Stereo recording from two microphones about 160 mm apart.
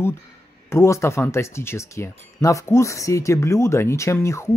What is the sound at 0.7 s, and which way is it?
Speech, 20° left (ahead or behind).